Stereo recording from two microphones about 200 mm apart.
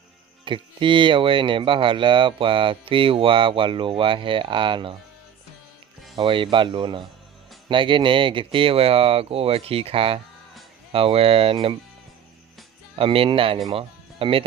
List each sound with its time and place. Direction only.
0.4 s speech: 25° right (ahead or behind)
6.1 s speech: 25° right (ahead or behind)
13.0 s speech: 25° right (ahead or behind)